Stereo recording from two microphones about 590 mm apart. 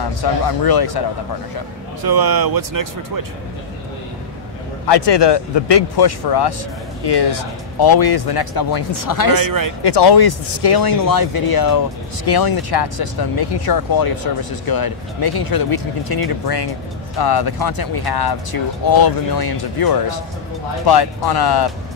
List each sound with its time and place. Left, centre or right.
0.2 s speech: left
2.0 s speech: right
4.8 s speech: left
9.4 s speech: right
9.8 s speech: left